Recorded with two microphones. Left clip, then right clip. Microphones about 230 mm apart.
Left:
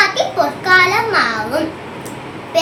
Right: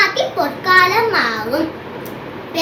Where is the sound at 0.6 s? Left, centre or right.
Centre.